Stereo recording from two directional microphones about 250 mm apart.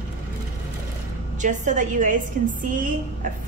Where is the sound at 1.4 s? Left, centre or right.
Right.